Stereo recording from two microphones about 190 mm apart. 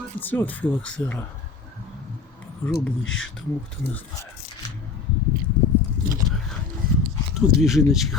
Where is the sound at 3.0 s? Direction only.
90° left.